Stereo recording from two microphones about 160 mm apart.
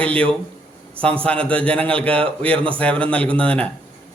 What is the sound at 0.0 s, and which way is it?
A man's voice, 10° left (ahead or behind).